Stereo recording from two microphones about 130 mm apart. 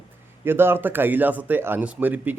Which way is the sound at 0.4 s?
15° right (ahead or behind).